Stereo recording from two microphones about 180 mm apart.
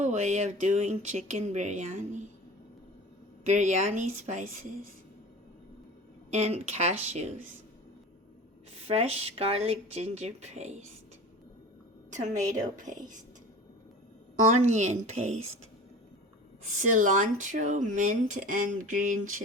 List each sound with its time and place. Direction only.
0.0 s speech: 40° right (ahead or behind)
3.4 s speech: 40° right (ahead or behind)
6.3 s speech: 35° right (ahead or behind)
8.9 s speech: 35° right (ahead or behind)
12.1 s speech: 45° right (ahead or behind)
14.4 s speech: 40° right (ahead or behind)
16.9 s speech: 45° right (ahead or behind)